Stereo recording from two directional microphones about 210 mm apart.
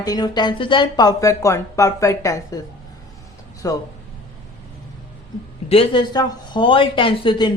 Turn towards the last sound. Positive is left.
turn(degrees=20)  # may be behind; listen again after turning